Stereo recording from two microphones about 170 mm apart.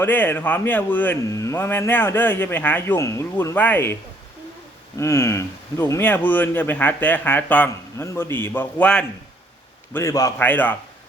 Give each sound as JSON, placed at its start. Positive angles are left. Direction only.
{"t": 0.0, "sound": "speech", "side_deg": 10}
{"t": 4.9, "sound": "speech", "side_deg": 15}
{"t": 9.9, "sound": "a man's voice", "side_deg": 20}